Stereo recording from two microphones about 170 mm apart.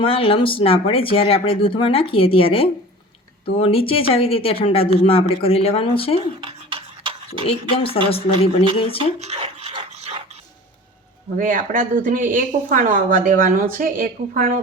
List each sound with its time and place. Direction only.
0.0 s speech: 30° left (ahead or behind)
6.4 s a sound: 30° right (ahead or behind)
7.4 s speech: 35° left (ahead or behind)
9.0 s dog: 40° right (ahead or behind)
11.3 s speech: 55° right (ahead or behind)